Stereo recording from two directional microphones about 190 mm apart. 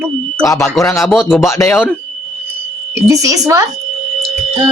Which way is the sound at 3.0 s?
15° right (ahead or behind).